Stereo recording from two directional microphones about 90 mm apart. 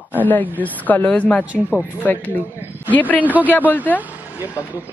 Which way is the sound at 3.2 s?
20° right (ahead or behind).